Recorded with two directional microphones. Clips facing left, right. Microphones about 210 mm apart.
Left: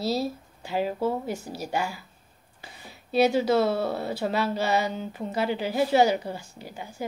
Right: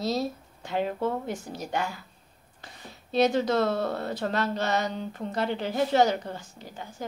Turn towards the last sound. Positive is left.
turn(degrees=10)  # may be behind; listen again after turning